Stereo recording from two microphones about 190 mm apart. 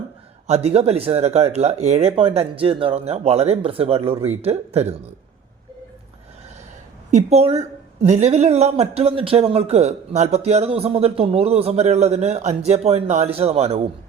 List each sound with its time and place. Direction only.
0.4 s speech: 35° right (ahead or behind)
7.1 s speech: 35° right (ahead or behind)